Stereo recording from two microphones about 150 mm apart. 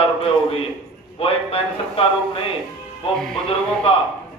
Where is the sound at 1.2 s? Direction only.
40° left (ahead or behind).